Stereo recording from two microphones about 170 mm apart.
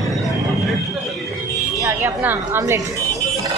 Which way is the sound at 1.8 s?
15° right (ahead or behind).